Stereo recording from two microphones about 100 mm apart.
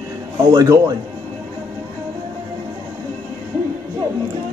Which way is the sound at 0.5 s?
40° right (ahead or behind).